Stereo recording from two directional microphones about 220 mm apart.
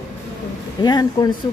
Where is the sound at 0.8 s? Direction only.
20° left (ahead or behind).